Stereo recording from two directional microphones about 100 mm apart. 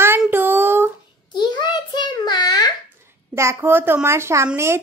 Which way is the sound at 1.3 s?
50° left (ahead or behind).